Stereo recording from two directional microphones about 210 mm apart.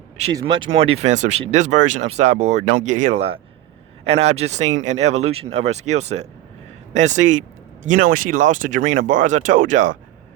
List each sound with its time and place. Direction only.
0.3 s speech: 20° right (ahead or behind); by 10.0 s 40° right (ahead or behind)